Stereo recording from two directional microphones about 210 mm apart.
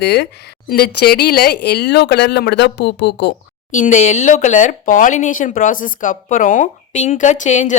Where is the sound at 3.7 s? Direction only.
35° left (ahead or behind).